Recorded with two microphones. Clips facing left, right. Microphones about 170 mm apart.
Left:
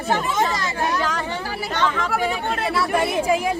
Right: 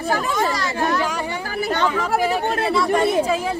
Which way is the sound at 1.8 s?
10° right (ahead or behind).